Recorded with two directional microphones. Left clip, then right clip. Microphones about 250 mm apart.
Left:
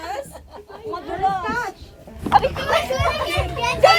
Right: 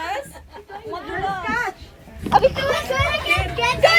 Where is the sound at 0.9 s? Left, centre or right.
Centre.